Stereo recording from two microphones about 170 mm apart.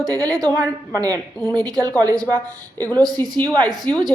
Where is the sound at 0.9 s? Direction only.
20° right (ahead or behind).